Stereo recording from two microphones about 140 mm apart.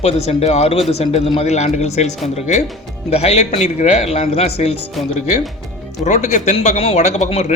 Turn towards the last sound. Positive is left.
turn(degrees=50)  # may be behind; listen again after turning